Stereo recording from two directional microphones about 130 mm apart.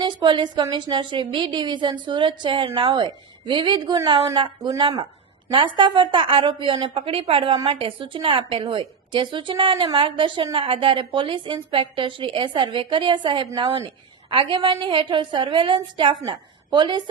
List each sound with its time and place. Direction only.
0.0 s a woman's voice: 35° right (ahead or behind)